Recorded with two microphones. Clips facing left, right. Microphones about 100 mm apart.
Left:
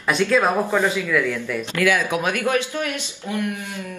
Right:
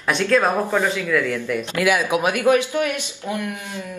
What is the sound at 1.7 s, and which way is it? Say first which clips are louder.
Speech: right 1 dB; 15° right (ahead or behind).